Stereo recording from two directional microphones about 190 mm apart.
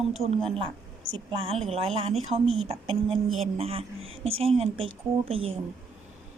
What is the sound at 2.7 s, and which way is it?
A woman's voice, 30° right (ahead or behind).